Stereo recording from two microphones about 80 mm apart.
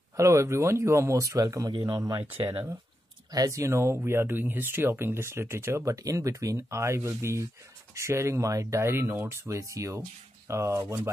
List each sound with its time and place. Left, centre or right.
0.2 s speech: right
2.1 s speech: right
3.3 s speech: right